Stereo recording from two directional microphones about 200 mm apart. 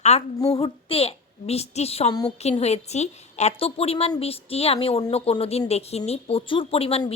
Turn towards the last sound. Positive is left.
turn(degrees=30)  # may be behind; listen again after turning